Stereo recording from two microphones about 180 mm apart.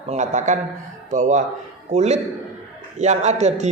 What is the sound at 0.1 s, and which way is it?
A man's voice, 40° right (ahead or behind).